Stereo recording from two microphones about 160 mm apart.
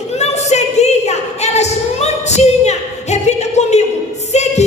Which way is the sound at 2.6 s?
45° left (ahead or behind).